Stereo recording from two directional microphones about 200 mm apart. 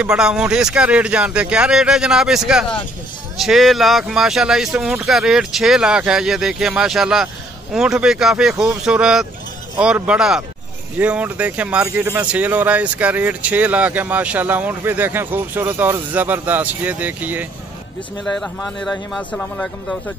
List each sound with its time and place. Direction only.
0.0 s speech: 5° right (ahead or behind)
18.2 s speech: 5° left (ahead or behind)